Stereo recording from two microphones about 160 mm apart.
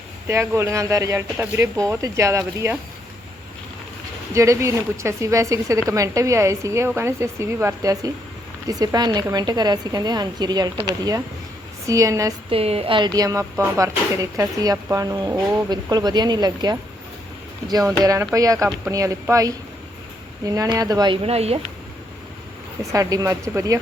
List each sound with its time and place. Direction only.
0.3 s speech: 15° right (ahead or behind)
4.4 s speech: 20° right (ahead or behind)
12.5 s speech: 40° right (ahead or behind)
21.2 s speech: 40° right (ahead or behind)
22.8 s speech: 20° right (ahead or behind)